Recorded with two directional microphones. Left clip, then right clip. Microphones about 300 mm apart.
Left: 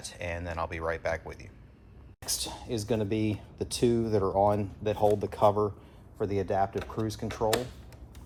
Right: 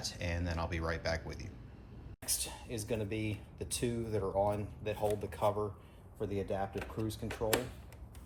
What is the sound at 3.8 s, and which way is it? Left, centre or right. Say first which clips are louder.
Speech: left 10 dB; left.